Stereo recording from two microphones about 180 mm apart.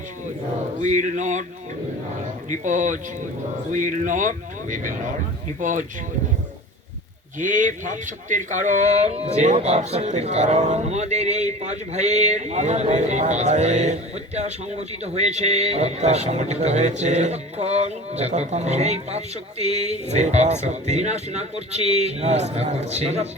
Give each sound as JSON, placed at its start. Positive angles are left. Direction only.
{"t": 0.8, "sound": "speech", "side_deg": -45}
{"t": 2.5, "sound": "speech", "side_deg": -45}
{"t": 7.3, "sound": "speech", "side_deg": -45}